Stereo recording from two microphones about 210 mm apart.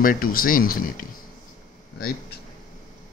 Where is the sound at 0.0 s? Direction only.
40° left (ahead or behind).